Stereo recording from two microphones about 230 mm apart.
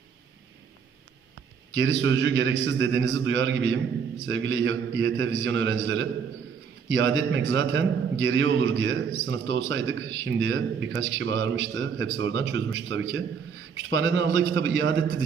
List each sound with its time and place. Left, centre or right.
1.7 s a man's voice: right